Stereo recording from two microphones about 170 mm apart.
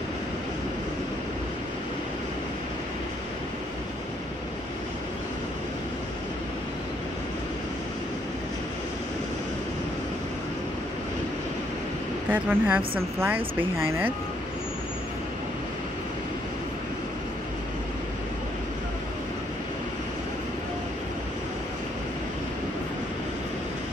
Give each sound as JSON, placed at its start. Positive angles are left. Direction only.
{"t": 12.3, "sound": "speech", "side_deg": -10}